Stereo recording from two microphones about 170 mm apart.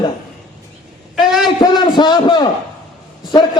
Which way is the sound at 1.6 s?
25° left (ahead or behind).